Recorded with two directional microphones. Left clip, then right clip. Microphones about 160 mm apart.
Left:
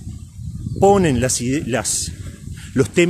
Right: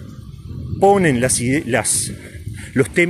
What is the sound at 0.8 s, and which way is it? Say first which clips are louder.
Speech: right 1 dB; 20° left (ahead or behind).